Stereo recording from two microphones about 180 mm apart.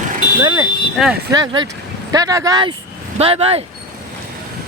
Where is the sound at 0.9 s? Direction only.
Centre (ahead or behind).